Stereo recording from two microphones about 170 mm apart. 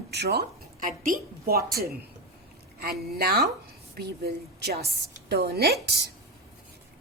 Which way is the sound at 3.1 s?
65° right (ahead or behind).